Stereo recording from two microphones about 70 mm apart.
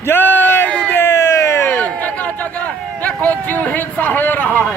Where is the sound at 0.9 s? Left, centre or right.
Left.